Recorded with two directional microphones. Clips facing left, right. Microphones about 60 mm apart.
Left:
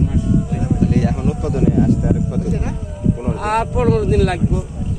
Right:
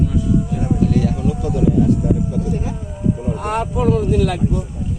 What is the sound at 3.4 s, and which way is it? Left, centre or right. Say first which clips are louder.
Speech: left 3 dB; left.